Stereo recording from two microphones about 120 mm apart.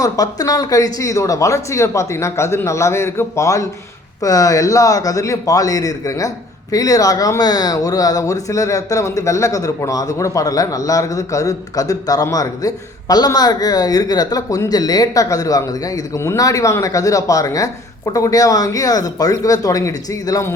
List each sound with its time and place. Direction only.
0.0 s a man's voice: 30° left (ahead or behind)